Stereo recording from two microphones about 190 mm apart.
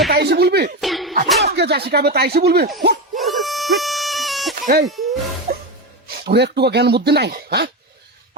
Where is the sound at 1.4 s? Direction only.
60° right (ahead or behind).